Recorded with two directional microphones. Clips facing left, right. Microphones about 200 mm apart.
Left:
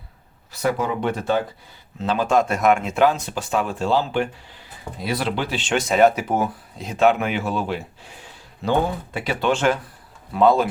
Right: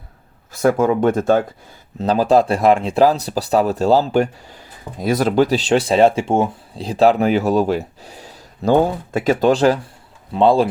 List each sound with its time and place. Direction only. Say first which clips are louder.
0.5 s speech: right 7 dB; 45° right (ahead or behind); by 10.7 s 30° right (ahead or behind)